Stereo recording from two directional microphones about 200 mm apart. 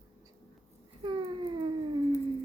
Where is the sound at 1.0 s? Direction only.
25° right (ahead or behind).